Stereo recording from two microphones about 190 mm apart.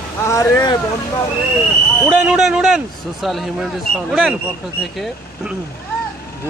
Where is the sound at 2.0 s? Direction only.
Centre (ahead or behind).